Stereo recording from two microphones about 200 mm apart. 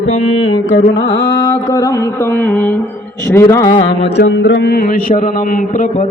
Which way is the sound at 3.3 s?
15° left (ahead or behind).